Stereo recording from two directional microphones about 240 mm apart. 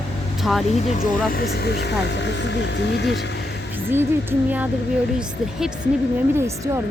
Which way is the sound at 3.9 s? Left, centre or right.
Centre.